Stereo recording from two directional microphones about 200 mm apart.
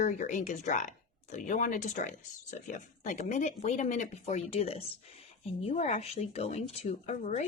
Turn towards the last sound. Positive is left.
turn(degrees=35)  # may be behind; listen again after turning